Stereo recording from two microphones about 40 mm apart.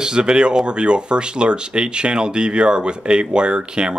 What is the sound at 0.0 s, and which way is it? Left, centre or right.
Speech, right.